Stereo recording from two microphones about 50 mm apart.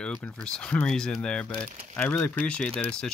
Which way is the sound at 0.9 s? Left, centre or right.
Centre.